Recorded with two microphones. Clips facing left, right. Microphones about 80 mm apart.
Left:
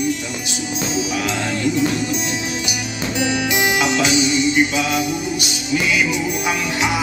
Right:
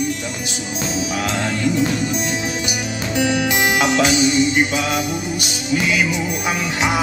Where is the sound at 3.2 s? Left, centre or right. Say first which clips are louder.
Right 1 dB; right.